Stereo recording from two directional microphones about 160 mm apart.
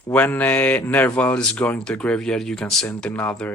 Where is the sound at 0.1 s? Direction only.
10° left (ahead or behind).